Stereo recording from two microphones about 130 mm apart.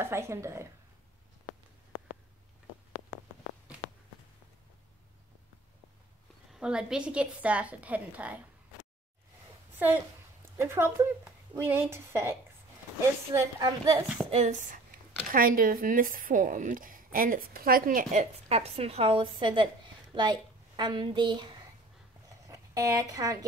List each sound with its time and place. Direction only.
0.0 s a woman's voice: 20° right (ahead or behind)
6.5 s a woman's voice: 5° right (ahead or behind)
9.8 s a woman's voice: 15° right (ahead or behind)
14.3 s speech: 60° right (ahead or behind); by 18.2 s 90° right
18.5 s a woman's voice: 50° right (ahead or behind)
22.5 s speech: 25° right (ahead or behind)